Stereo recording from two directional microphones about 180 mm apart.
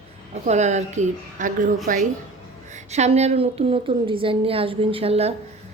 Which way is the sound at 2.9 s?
40° right (ahead or behind).